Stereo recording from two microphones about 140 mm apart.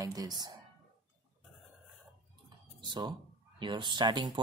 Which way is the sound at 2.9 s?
30° right (ahead or behind).